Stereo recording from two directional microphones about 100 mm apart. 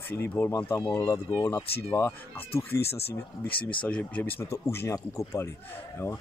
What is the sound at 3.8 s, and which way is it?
Speech, 15° left (ahead or behind).